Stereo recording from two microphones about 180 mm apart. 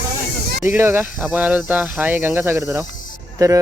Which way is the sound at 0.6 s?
15° right (ahead or behind).